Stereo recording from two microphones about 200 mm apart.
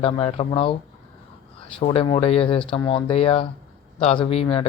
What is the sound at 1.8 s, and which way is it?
Speech, 30° left (ahead or behind).